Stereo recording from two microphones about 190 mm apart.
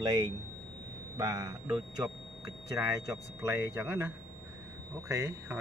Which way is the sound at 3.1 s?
15° right (ahead or behind).